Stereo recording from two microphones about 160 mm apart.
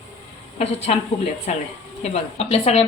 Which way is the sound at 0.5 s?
40° left (ahead or behind).